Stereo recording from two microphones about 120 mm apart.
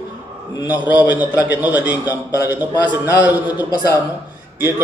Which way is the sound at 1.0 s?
15° right (ahead or behind).